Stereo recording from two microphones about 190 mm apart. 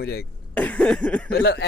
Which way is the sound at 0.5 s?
5° left (ahead or behind).